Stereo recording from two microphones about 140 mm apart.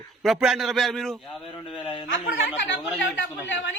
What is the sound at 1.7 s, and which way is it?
Speech, 35° left (ahead or behind).